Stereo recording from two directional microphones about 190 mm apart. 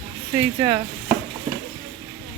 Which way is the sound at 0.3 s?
15° right (ahead or behind).